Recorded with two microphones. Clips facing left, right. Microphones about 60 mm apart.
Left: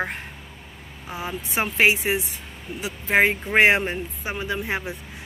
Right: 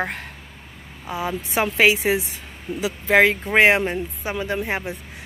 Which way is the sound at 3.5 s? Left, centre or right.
Right.